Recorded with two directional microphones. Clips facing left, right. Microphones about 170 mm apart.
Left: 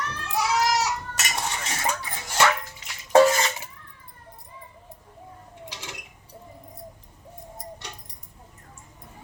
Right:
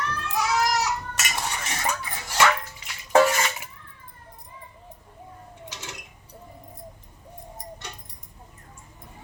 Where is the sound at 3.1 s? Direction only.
30° left (ahead or behind).